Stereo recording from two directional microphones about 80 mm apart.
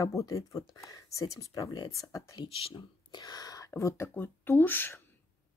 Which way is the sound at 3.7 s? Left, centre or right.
Left.